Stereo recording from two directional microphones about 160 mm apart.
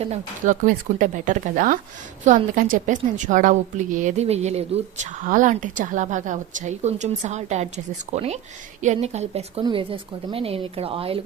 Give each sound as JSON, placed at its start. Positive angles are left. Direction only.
{"t": 0.0, "sound": "a woman's voice", "side_deg": -40}
{"t": 0.6, "sound": "a woman's voice", "side_deg": -55}
{"t": 9.6, "sound": "a woman's voice", "side_deg": -30}